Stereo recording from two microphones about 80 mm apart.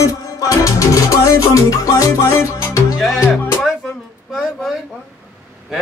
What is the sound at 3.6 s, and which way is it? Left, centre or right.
Music, centre.